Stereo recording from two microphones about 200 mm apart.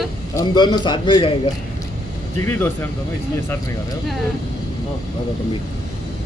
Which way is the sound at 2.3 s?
10° left (ahead or behind).